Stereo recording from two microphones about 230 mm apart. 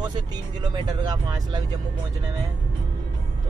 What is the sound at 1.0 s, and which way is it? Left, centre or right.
Speech, centre.